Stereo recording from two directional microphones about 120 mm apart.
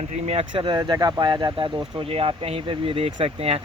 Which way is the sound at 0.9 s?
35° right (ahead or behind).